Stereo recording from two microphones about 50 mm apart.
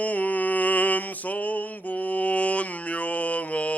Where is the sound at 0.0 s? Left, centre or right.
Left.